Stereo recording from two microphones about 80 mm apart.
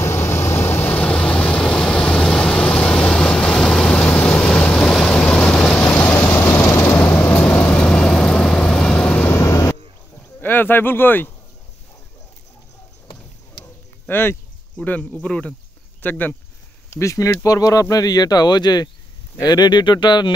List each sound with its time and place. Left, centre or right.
0.0 s vehicle: left
0.9 s vehicle: centre
6.2 s vehicle: left
6.5 s vehicle: left
9.3 s vehicle: left
10.4 s speech: left
14.0 s speech: left
15.2 s speech: centre
16.9 s speech: left